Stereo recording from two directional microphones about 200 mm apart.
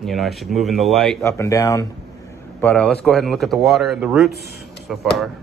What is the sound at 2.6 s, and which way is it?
Speech, 5° left (ahead or behind).